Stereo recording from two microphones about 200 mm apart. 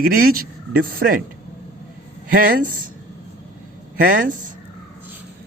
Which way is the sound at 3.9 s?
45° right (ahead or behind).